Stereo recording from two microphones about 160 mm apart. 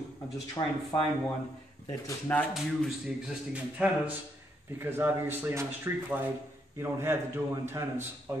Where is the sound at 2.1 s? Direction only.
10° left (ahead or behind).